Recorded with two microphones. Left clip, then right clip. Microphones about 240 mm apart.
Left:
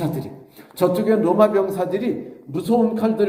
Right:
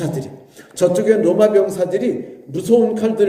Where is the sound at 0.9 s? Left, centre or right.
Left.